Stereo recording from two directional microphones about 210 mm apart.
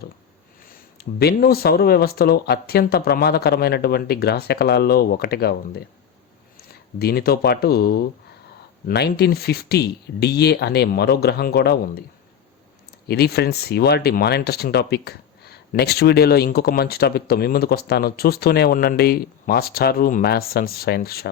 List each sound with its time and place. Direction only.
0.7 s speech: 45° left (ahead or behind)
13.1 s speech: 50° left (ahead or behind)